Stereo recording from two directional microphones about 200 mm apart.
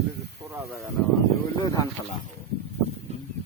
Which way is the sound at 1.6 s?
15° left (ahead or behind).